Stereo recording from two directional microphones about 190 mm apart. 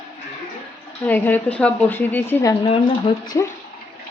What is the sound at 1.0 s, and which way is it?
A woman's voice, 10° left (ahead or behind).